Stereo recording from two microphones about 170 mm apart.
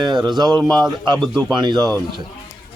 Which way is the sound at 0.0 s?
25° right (ahead or behind).